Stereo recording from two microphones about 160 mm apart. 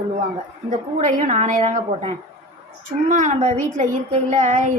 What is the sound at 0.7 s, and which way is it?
A woman's voice, 45° right (ahead or behind).